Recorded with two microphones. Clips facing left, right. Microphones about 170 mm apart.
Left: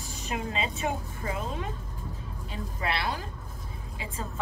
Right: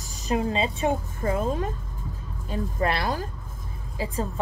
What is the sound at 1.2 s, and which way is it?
A woman's voice, 45° right (ahead or behind).